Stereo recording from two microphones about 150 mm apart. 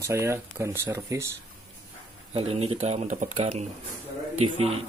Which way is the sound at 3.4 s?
40° right (ahead or behind).